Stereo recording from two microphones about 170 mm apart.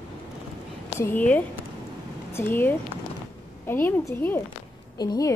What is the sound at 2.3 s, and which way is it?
A woman's voice, 10° left (ahead or behind).